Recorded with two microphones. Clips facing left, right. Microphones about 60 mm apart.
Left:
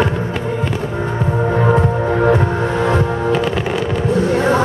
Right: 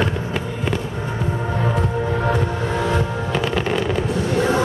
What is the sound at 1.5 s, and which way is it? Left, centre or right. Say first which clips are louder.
Music: left 8 dB; left.